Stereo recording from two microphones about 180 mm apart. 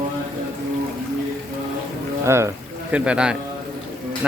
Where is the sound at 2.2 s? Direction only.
15° right (ahead or behind).